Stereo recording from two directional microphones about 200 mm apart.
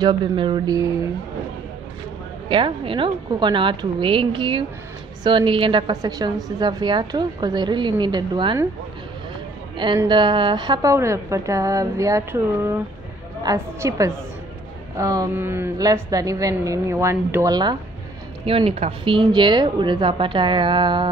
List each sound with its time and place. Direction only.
0.0 s a woman's voice: 25° right (ahead or behind)
2.4 s a woman's voice: 25° right (ahead or behind)
9.8 s a woman's voice: 25° right (ahead or behind)